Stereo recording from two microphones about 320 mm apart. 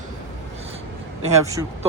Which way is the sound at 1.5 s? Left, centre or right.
Centre.